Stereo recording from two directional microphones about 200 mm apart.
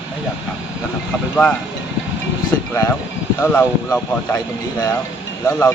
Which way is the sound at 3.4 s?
10° left (ahead or behind).